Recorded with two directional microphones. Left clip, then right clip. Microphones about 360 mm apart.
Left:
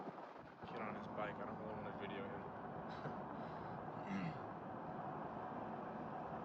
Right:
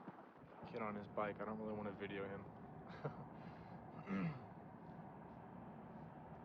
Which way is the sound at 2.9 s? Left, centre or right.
Centre.